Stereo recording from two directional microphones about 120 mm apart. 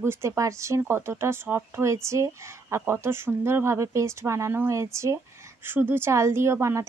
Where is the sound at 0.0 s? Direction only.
20° right (ahead or behind).